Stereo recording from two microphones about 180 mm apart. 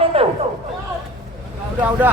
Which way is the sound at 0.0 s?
35° right (ahead or behind).